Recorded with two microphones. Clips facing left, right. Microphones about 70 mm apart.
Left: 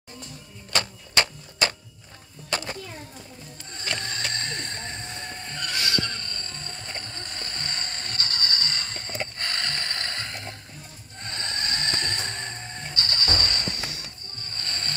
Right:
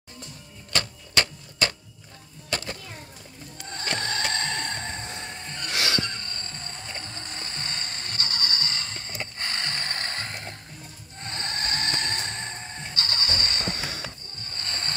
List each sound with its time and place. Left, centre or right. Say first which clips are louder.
0.7 s typewriter: left 1 dB; centre
2.5 s a sound: left 2 dB; centre
3.7 s music: right 2 dB; right
4.2 s a sound: right 3 dB; right
5.1 s train: left 1 dB; centre
6.0 s train wheels squealing: left 1 dB; right
6.8 s music: even; centre
9.5 s music: left 1 dB; right